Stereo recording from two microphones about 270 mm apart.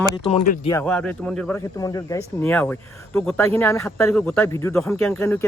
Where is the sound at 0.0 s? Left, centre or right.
Left.